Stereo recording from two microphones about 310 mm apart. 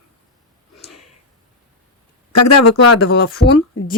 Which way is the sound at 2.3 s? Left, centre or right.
Left.